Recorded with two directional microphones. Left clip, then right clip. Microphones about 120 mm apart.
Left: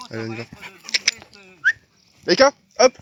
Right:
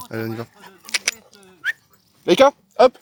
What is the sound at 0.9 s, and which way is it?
Honk, 35° right (ahead or behind).